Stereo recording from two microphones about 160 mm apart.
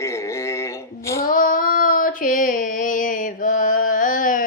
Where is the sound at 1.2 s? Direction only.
60° left (ahead or behind).